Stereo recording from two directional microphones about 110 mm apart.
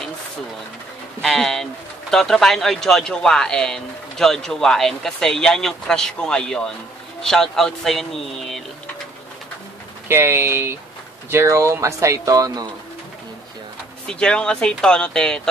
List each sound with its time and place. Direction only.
1.2 s speech: 5° left (ahead or behind)
10.0 s speech: 20° right (ahead or behind)
14.0 s speech: 10° left (ahead or behind)